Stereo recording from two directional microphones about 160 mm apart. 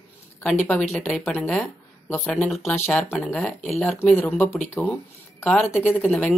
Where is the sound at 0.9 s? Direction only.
10° left (ahead or behind).